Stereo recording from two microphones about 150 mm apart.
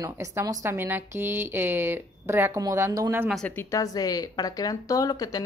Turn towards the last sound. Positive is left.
turn(degrees=25)  # may be behind; listen again after turning